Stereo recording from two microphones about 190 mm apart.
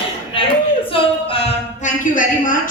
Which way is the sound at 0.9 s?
30° left (ahead or behind).